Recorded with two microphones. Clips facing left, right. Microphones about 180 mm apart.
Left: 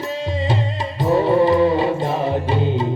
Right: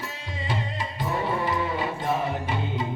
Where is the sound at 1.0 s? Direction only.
30° left (ahead or behind).